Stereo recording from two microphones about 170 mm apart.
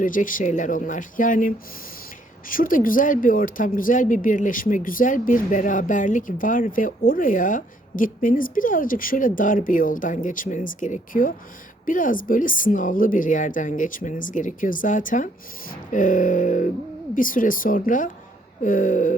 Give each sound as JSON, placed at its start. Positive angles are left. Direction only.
{"t": 0.0, "sound": "speech", "side_deg": 50}